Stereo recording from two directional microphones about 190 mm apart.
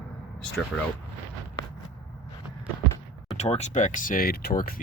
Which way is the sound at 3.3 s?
35° left (ahead or behind).